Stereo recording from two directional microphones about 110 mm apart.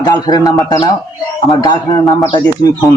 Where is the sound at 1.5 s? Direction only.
35° left (ahead or behind).